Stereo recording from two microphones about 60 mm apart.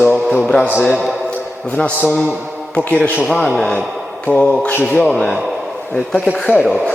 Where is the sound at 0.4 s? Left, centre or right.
Centre.